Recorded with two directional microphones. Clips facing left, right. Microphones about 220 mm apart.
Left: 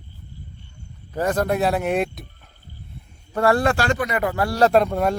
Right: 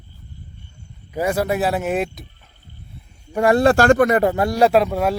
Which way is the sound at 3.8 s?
50° right (ahead or behind).